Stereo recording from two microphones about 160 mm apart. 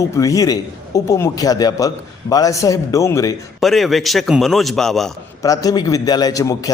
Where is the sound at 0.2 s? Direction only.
20° left (ahead or behind).